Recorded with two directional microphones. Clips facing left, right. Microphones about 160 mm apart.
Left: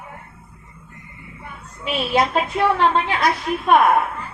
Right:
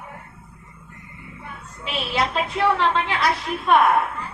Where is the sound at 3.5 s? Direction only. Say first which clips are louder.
Left 4 dB; 45° left (ahead or behind).